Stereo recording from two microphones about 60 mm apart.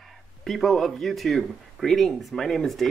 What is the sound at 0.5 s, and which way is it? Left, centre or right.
Speech, centre.